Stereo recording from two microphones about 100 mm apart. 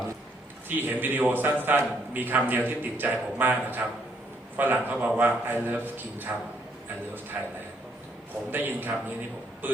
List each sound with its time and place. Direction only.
0.7 s a man's voice: 20° right (ahead or behind)
7.3 s a man's voice: 15° right (ahead or behind)